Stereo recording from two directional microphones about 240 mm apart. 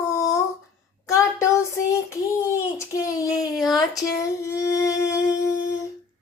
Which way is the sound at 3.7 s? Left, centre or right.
Centre.